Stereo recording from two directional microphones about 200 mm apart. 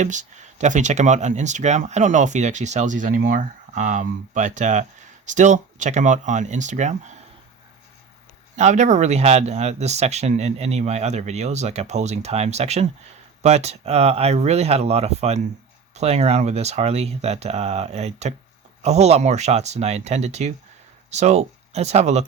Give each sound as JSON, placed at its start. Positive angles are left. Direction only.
{"t": 0.0, "sound": "speech", "side_deg": -35}
{"t": 8.5, "sound": "speech", "side_deg": -35}